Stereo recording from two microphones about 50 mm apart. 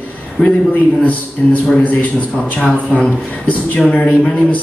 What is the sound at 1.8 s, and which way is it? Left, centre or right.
A man's voice, left.